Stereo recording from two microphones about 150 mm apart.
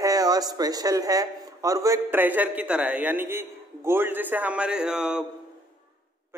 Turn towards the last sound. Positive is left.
turn(degrees=-5)  # may be behind; listen again after turning